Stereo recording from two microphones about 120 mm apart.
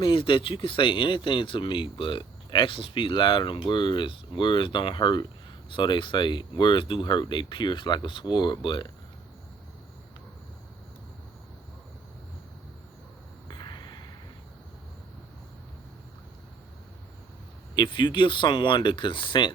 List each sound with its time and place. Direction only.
0.0 s speech: 45° left (ahead or behind)
13.5 s a sound: 40° left (ahead or behind)
17.7 s speech: 40° left (ahead or behind)